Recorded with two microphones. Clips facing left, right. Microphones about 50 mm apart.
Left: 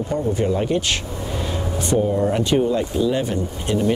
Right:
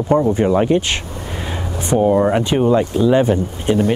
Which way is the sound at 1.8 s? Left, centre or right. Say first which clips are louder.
Right 6 dB; right.